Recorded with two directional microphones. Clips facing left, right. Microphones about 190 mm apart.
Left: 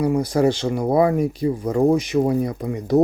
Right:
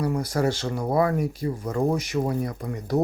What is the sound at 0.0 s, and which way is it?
Speech, 15° left (ahead or behind).